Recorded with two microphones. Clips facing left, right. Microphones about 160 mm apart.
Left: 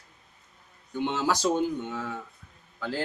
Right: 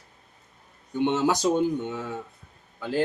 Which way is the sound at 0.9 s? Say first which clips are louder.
Right 4 dB; 20° right (ahead or behind).